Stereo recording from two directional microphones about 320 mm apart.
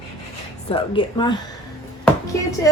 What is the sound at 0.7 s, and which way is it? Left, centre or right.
Speech, centre.